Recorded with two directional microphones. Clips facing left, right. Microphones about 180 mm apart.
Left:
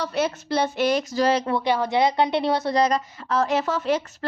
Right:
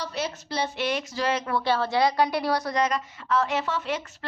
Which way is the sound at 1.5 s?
15° left (ahead or behind).